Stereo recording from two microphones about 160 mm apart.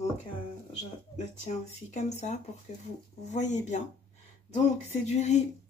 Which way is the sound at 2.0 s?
45° left (ahead or behind).